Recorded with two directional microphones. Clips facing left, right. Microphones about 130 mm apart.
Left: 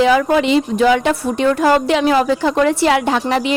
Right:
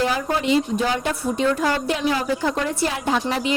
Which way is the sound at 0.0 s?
90° left.